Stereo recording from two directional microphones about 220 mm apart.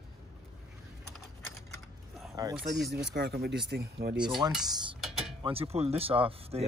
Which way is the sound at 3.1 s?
45° right (ahead or behind).